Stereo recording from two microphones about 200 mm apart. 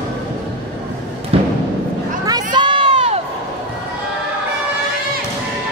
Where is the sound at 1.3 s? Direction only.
30° right (ahead or behind).